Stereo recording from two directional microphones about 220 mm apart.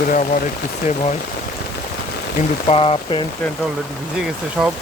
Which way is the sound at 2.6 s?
25° left (ahead or behind).